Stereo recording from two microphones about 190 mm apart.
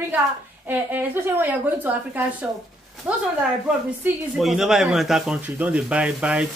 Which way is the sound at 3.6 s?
5° right (ahead or behind).